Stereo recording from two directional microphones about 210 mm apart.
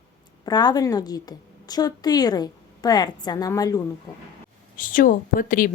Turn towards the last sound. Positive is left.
turn(degrees=40)  # may be behind; listen again after turning